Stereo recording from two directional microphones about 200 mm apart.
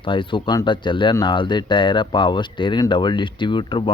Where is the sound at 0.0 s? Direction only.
25° left (ahead or behind).